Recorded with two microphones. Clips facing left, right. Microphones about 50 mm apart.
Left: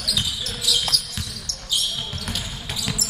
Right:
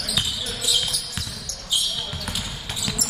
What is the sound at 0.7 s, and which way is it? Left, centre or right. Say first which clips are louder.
Basketball bounce: left 1 dB; right.